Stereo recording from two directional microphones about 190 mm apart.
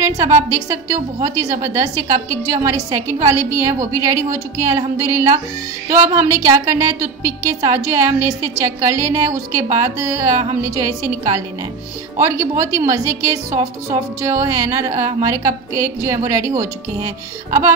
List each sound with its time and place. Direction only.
0.0 s a woman's voice: 15° right (ahead or behind)